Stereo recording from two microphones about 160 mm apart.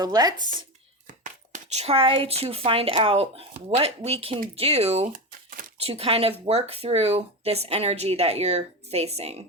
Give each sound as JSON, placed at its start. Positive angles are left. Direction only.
{"t": 0.0, "sound": "speech", "side_deg": -25}
{"t": 1.0, "sound": "whispering", "side_deg": -55}
{"t": 1.8, "sound": "speech", "side_deg": -35}
{"t": 5.1, "sound": "a sound", "side_deg": -60}
{"t": 5.7, "sound": "speech", "side_deg": -40}